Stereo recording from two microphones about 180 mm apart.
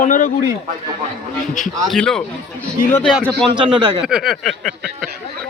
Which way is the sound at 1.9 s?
5° left (ahead or behind).